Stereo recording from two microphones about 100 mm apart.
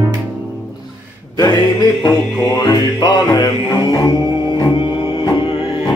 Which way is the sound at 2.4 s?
35° left (ahead or behind).